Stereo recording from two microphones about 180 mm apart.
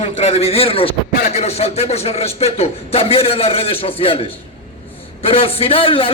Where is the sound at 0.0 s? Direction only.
35° left (ahead or behind).